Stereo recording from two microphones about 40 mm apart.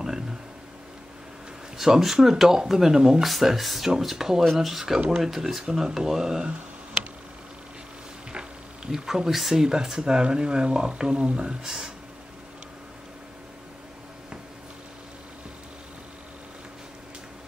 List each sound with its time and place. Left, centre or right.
1.8 s speech: centre
3.2 s speech: centre
8.9 s speech: centre; by 11.5 s right
11.6 s speech: centre